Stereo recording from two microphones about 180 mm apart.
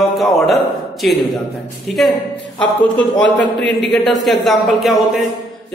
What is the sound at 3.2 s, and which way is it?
Speech, 85° left.